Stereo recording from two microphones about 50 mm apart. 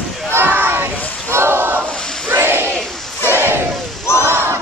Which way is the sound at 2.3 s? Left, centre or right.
Right.